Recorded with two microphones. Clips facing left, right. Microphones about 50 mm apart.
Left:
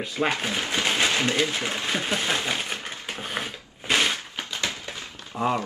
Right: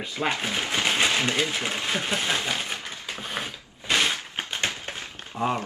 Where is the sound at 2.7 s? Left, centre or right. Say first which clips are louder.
Left 1 dB; left.